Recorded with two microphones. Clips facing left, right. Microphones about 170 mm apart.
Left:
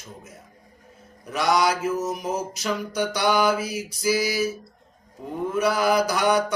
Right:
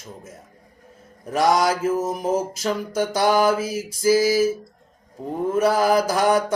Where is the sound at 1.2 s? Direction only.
45° right (ahead or behind).